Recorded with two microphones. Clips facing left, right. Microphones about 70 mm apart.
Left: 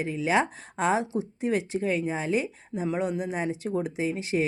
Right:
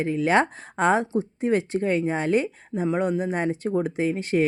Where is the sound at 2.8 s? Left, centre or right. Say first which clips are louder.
Right 4 dB; right.